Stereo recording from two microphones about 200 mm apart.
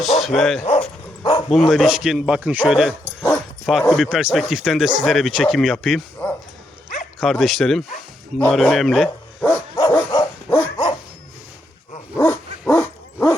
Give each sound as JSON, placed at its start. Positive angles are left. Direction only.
{"t": 0.0, "sound": "speech", "side_deg": 0}
{"t": 1.2, "sound": "bow-wow", "side_deg": 20}
{"t": 1.5, "sound": "speech", "side_deg": 0}
{"t": 7.2, "sound": "zipper", "side_deg": 0}
{"t": 12.1, "sound": "dog", "side_deg": 15}